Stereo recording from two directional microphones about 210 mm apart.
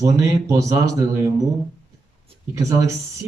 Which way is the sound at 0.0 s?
15° right (ahead or behind).